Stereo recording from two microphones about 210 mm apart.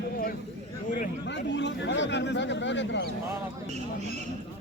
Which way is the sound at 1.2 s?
55° left (ahead or behind).